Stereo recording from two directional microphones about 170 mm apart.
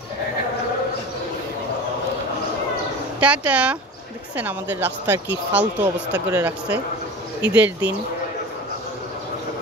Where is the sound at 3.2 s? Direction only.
10° right (ahead or behind).